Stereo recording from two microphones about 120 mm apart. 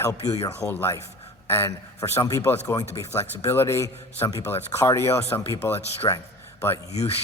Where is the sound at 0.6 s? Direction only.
15° left (ahead or behind).